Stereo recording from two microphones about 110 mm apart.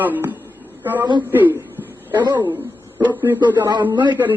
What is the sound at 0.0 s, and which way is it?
A man's voice, 15° right (ahead or behind).